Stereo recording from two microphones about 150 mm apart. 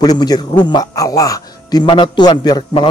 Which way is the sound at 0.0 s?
25° left (ahead or behind).